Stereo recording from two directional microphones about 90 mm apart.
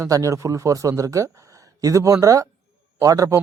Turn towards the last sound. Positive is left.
turn(degrees=-40)  # may be behind; listen again after turning